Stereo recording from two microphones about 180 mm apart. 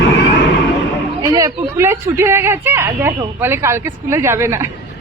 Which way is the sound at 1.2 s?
20° right (ahead or behind).